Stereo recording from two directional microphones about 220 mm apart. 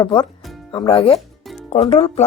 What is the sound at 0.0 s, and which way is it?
A woman's voice, 20° left (ahead or behind).